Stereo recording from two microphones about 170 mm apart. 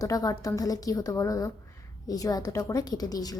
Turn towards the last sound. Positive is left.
turn(degrees=20)  # may be behind; listen again after turning